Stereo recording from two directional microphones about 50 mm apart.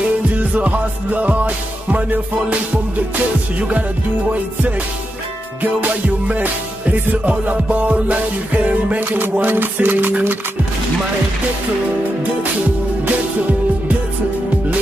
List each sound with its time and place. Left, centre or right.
0.4 s music: right
5.6 s music: right